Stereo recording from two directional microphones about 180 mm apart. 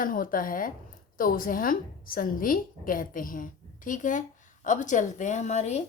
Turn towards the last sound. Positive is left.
turn(degrees=40)  # may be behind; listen again after turning